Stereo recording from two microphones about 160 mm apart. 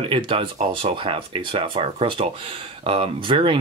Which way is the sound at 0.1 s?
30° right (ahead or behind).